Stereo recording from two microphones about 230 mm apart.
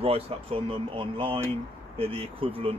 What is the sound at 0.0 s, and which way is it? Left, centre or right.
Speech, right.